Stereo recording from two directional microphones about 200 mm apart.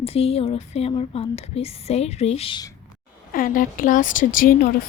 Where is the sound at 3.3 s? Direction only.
45° left (ahead or behind).